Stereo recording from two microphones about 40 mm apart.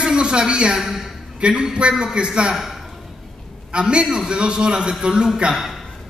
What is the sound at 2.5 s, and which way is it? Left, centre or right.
Speech, centre.